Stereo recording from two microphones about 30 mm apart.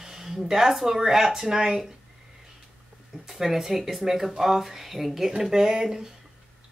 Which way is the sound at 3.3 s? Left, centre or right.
Centre.